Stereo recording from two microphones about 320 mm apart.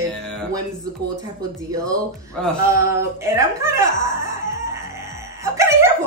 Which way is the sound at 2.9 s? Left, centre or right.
Centre.